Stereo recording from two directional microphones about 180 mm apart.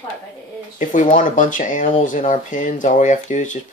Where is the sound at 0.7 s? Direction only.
45° left (ahead or behind).